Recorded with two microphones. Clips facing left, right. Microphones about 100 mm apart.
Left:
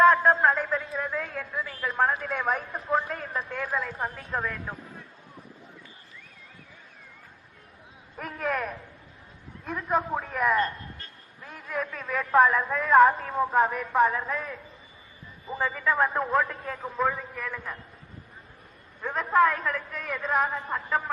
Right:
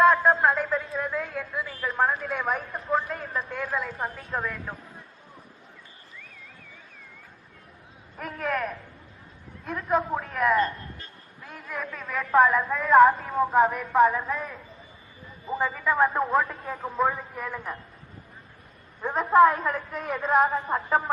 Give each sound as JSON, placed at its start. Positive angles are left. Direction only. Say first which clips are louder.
{"t": 0.0, "sound": "a sound", "louder": "even", "side_deg": 0}
{"t": 8.2, "sound": "a man's voice", "louder": "right 1 dB", "side_deg": 0}
{"t": 15.5, "sound": "a man's voice", "louder": "right 2 dB", "side_deg": -10}
{"t": 17.3, "sound": "a woman's voice", "louder": "right 2 dB", "side_deg": -20}
{"t": 19.1, "sound": "a woman's voice", "louder": "right 4 dB", "side_deg": -30}